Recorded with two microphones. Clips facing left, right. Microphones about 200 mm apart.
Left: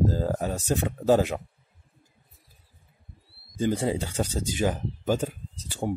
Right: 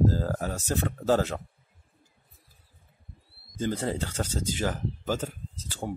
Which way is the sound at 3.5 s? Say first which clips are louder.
Left 4 dB; 15° left (ahead or behind).